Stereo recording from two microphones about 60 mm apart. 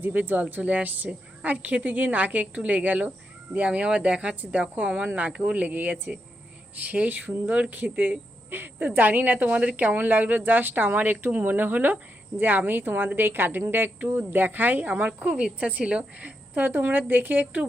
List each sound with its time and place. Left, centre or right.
0.0 s speech: right